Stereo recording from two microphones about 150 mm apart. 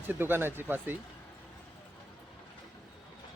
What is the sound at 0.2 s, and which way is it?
Speech, 15° right (ahead or behind).